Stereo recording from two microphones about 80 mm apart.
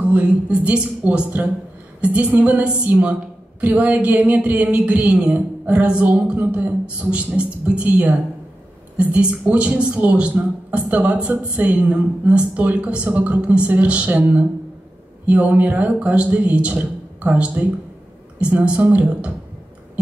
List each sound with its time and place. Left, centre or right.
0.0 s a woman's voice: centre